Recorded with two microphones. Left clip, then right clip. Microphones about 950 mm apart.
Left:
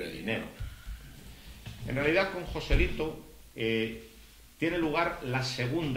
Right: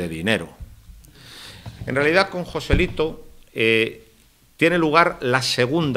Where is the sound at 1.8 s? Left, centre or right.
Right.